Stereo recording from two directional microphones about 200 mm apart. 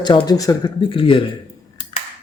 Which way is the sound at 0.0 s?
25° left (ahead or behind).